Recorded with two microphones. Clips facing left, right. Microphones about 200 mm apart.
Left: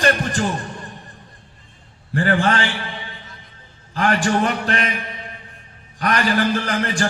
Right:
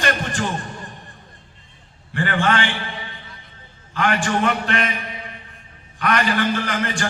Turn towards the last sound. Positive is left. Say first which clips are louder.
# left 2 dB
turn(degrees=35)  # may be behind; listen again after turning